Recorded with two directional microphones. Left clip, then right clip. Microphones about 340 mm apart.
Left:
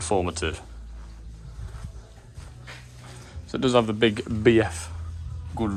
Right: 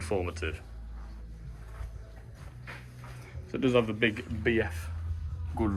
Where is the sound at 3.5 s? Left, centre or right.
Centre.